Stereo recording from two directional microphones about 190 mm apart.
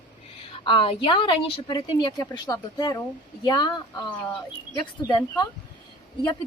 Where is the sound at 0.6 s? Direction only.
25° left (ahead or behind).